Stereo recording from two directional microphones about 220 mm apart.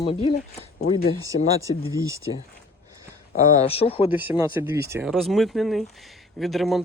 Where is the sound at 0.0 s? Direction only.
25° left (ahead or behind).